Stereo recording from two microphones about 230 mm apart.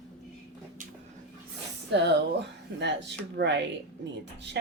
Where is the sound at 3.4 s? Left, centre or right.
Right.